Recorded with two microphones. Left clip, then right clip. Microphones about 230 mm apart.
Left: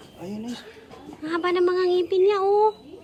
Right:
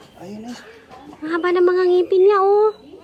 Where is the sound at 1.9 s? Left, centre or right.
Centre.